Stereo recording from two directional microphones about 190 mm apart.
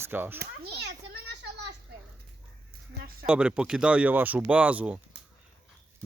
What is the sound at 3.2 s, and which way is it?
Speech, 5° right (ahead or behind).